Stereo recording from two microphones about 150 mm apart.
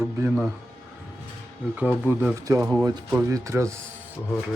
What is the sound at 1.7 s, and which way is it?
Speech, 10° right (ahead or behind).